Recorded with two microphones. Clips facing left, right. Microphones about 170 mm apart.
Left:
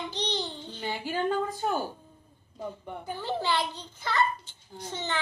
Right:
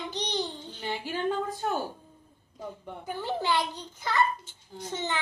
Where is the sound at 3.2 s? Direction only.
15° right (ahead or behind).